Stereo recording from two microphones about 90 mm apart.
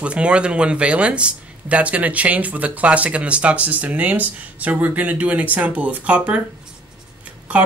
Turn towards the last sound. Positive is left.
turn(degrees=-15)  # may be behind; listen again after turning